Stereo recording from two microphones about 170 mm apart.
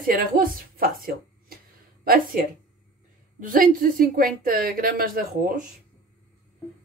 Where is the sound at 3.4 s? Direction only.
55° right (ahead or behind).